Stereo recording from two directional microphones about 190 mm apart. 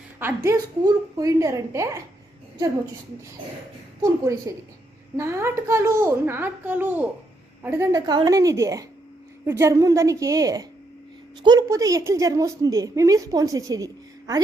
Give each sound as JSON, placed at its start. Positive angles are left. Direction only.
{"t": 0.2, "sound": "a woman's voice", "side_deg": -15}
{"t": 4.0, "sound": "a woman's voice", "side_deg": -15}